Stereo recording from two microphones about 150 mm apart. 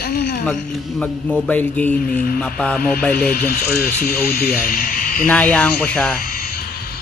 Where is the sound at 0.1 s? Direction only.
90° left.